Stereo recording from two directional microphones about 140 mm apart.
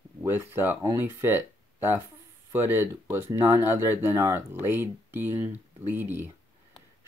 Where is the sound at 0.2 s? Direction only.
15° right (ahead or behind).